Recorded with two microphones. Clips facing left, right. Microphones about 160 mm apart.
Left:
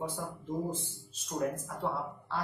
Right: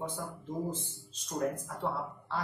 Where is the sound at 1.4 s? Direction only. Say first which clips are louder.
Even; centre (ahead or behind).